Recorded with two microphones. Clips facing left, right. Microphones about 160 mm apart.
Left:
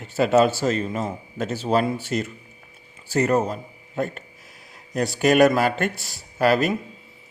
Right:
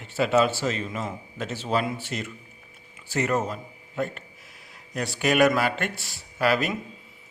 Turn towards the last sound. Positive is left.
turn(degrees=40)  # may be behind; listen again after turning